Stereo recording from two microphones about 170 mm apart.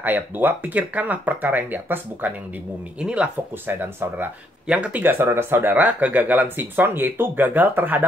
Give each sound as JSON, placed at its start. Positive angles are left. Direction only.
{"t": 0.0, "sound": "speech", "side_deg": -10}